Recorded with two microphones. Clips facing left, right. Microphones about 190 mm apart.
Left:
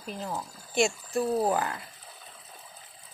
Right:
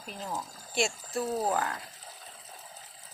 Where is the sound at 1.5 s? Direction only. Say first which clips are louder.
Left 2 dB; centre (ahead or behind).